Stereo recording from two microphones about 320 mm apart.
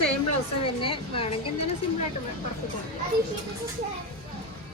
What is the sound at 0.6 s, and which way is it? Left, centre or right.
Speech, centre.